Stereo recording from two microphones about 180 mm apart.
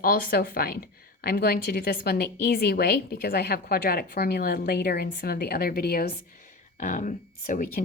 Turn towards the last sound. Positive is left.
turn(degrees=50)  # may be behind; listen again after turning